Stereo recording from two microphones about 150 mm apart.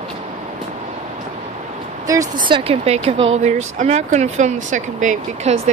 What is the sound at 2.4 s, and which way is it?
Speech, 35° right (ahead or behind).